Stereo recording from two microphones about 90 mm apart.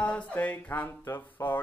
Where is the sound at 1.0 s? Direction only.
35° left (ahead or behind).